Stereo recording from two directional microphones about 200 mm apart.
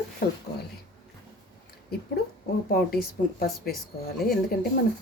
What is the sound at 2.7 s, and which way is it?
Speech, 50° left (ahead or behind).